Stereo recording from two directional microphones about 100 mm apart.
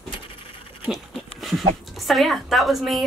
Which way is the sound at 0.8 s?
Centre (ahead or behind).